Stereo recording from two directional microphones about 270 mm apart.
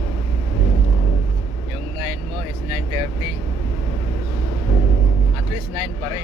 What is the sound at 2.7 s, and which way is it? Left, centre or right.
Vehicle, centre.